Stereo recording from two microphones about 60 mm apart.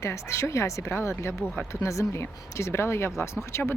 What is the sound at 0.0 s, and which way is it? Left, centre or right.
Speech, left.